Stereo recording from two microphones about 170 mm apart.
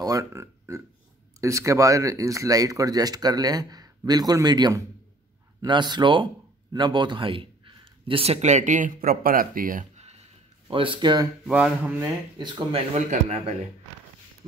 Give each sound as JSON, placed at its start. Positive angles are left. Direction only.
{"t": 0.0, "sound": "a man's voice", "side_deg": -20}
{"t": 11.4, "sound": "speech", "side_deg": -5}
{"t": 12.4, "sound": "speech", "side_deg": -25}
{"t": 12.9, "sound": "a man's voice", "side_deg": -40}